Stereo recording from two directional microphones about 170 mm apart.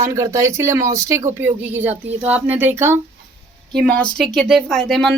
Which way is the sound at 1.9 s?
40° right (ahead or behind).